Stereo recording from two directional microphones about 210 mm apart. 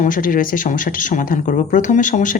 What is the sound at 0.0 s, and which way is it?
Speech, 40° left (ahead or behind).